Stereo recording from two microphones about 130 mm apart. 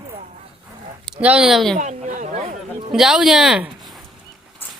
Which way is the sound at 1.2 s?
10° right (ahead or behind).